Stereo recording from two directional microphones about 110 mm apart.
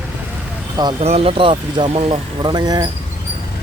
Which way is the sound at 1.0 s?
60° right (ahead or behind).